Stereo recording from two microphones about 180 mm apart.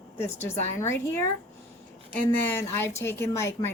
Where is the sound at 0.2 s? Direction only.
15° left (ahead or behind).